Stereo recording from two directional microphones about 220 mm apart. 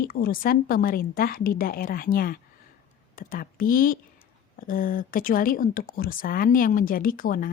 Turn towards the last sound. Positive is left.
turn(degrees=40)  # may be behind; listen again after turning